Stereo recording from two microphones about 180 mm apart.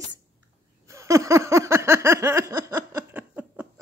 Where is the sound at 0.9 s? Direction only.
15° right (ahead or behind).